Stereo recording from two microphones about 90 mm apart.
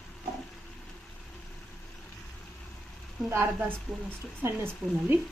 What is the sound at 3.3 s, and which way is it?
Speech, 25° right (ahead or behind).